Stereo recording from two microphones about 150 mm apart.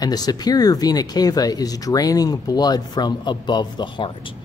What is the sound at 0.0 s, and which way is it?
Speech, 25° left (ahead or behind).